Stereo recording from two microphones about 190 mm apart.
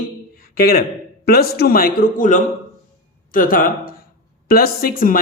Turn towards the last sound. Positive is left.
turn(degrees=50)  # may be behind; listen again after turning